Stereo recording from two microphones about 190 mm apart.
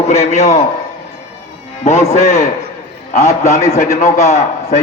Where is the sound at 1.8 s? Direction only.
35° left (ahead or behind).